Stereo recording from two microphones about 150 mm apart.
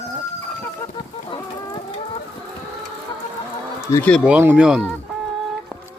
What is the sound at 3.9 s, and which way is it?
Speech, 10° left (ahead or behind).